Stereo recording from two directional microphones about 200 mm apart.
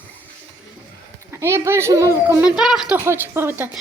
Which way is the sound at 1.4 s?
10° right (ahead or behind).